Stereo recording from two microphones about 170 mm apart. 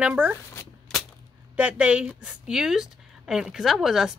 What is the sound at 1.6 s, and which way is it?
A woman's voice, 5° right (ahead or behind).